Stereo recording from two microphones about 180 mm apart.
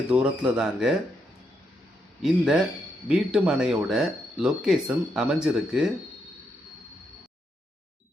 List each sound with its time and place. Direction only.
0.1 s speech: 5° right (ahead or behind)
2.2 s speech: centre (ahead or behind)